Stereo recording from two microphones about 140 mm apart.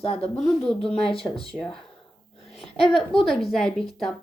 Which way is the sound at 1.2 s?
40° left (ahead or behind).